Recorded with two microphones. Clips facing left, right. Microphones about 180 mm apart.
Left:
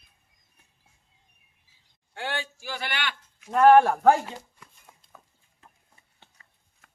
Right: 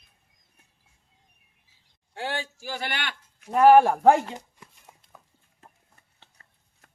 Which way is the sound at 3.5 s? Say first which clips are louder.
Right 1 dB; 10° right (ahead or behind).